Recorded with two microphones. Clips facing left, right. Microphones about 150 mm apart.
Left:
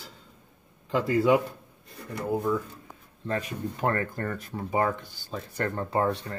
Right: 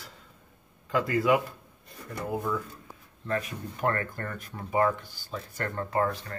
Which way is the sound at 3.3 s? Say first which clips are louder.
Left 1 dB; 30° left (ahead or behind).